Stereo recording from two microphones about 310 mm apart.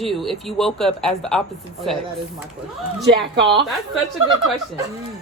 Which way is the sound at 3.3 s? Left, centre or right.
Centre.